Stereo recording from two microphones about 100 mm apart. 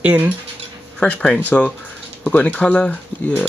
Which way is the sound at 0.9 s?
10° left (ahead or behind).